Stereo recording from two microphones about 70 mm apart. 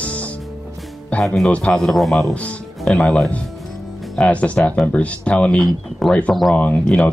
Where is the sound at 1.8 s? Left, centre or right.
Centre.